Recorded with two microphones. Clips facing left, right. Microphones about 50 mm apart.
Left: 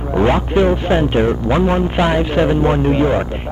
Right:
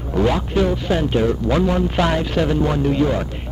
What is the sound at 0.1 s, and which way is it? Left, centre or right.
Speech, left.